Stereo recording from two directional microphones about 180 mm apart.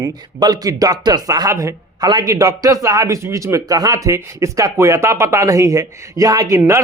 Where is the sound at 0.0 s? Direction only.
20° right (ahead or behind).